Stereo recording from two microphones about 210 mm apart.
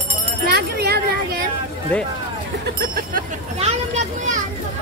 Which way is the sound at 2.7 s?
45° right (ahead or behind).